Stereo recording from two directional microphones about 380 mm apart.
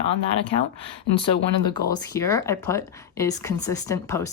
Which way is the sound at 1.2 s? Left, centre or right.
Centre.